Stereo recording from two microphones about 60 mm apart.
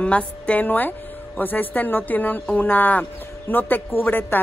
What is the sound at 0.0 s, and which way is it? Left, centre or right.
Speech, left.